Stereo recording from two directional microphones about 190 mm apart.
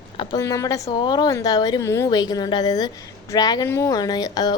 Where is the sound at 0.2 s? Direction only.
20° left (ahead or behind).